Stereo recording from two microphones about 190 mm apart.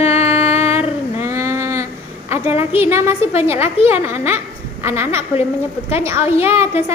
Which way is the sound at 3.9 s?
10° right (ahead or behind).